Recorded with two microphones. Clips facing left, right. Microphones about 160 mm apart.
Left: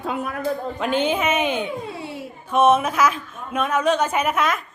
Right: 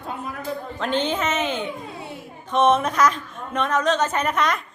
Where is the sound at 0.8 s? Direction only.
10° left (ahead or behind).